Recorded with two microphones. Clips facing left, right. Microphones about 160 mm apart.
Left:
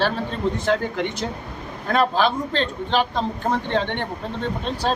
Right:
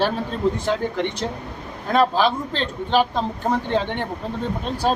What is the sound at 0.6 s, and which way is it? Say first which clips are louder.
A man's voice: even; centre (ahead or behind).